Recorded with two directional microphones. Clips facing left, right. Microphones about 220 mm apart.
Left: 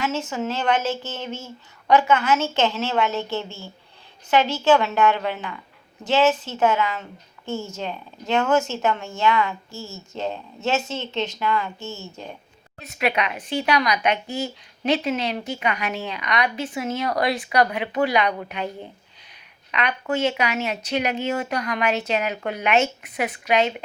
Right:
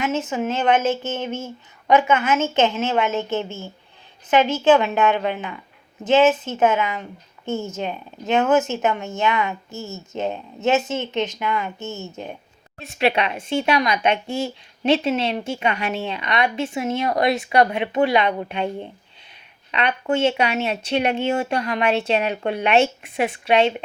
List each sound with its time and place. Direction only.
0.0 s speech: 20° right (ahead or behind)
4.3 s speech: 20° right (ahead or behind)
12.8 s speech: 30° right (ahead or behind)
19.7 s speech: 30° right (ahead or behind)